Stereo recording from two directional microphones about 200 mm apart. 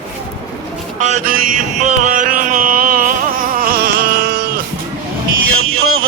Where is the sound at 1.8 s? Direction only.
40° right (ahead or behind).